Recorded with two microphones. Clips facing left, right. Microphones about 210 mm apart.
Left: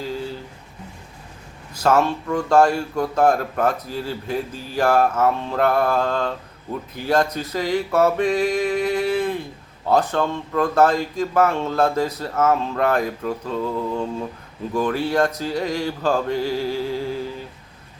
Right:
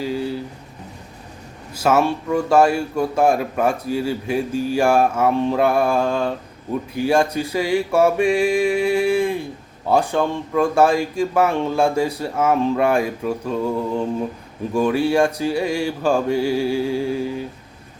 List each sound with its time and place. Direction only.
1.8 s a man's voice: 10° right (ahead or behind)